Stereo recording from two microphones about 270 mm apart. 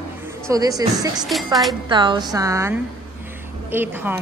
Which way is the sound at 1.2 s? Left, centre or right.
Centre.